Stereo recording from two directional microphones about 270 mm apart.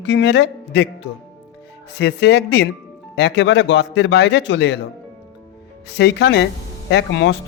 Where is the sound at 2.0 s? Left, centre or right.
Left.